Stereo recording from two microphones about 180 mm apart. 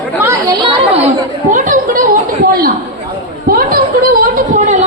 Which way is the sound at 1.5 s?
50° right (ahead or behind).